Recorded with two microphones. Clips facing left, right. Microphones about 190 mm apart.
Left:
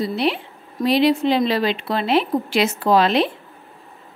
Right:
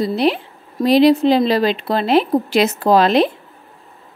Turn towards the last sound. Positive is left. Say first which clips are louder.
# right 3 dB
turn(degrees=-40)  # may be behind; listen again after turning